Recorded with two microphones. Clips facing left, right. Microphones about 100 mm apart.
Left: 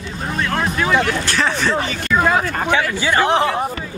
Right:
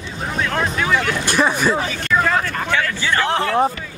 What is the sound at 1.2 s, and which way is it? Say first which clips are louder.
Speech: right 2 dB; 15° right (ahead or behind).